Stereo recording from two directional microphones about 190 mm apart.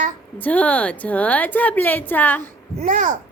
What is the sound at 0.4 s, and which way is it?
Speech, 10° left (ahead or behind).